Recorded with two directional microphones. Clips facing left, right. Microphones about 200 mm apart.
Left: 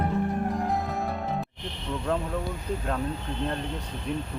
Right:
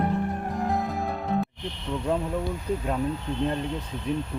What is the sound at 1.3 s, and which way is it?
Music, centre (ahead or behind).